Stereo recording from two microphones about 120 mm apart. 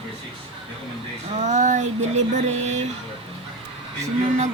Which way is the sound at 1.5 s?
90° right.